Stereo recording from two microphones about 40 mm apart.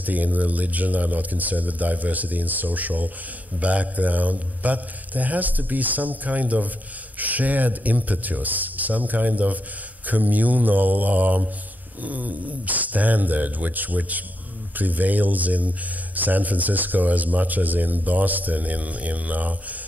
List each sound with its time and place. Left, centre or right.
0.0 s speech: right